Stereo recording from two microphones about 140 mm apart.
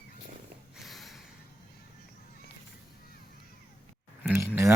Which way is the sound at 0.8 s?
Centre (ahead or behind).